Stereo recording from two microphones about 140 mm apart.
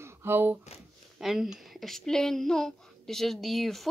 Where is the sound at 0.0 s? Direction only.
15° right (ahead or behind).